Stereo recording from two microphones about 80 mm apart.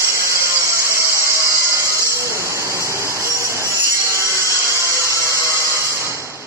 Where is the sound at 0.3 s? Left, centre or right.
Right.